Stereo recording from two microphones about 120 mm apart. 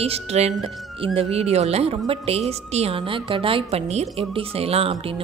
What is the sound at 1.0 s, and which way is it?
A woman's voice, 50° right (ahead or behind).